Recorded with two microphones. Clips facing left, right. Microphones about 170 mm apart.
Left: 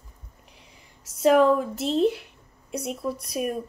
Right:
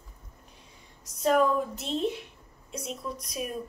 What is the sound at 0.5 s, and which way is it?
Whispering, 90° left.